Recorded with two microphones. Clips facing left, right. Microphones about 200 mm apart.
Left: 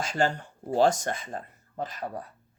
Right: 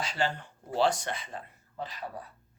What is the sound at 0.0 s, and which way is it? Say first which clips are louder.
Speech: left 5 dB; 45° left (ahead or behind).